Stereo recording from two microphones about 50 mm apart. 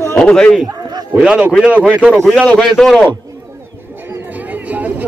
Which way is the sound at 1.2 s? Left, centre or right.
Centre.